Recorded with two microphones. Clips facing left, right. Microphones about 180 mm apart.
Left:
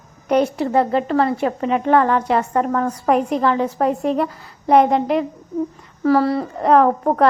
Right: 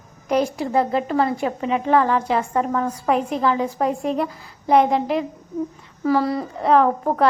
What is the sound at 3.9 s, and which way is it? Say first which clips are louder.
A woman's voice: left 3 dB; 40° left (ahead or behind).